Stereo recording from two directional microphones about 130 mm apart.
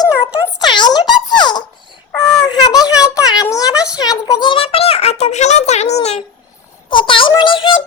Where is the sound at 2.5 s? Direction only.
30° left (ahead or behind); by 6.2 s 55° left (ahead or behind).